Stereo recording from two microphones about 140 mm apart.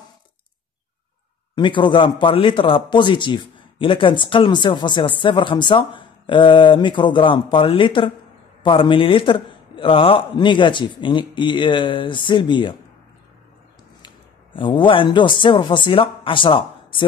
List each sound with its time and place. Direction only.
1.5 s a man's voice: 35° left (ahead or behind)
14.0 s speech: 35° left (ahead or behind)